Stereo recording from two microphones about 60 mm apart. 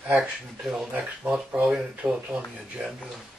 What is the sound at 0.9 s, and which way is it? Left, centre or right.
Speech, right.